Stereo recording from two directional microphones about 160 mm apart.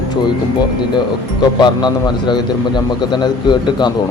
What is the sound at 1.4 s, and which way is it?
A man's voice, 25° left (ahead or behind).